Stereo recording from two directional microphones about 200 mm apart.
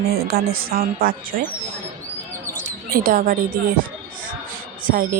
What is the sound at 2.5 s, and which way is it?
Speech, 45° right (ahead or behind).